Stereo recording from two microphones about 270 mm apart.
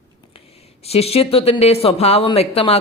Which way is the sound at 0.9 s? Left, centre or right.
Left.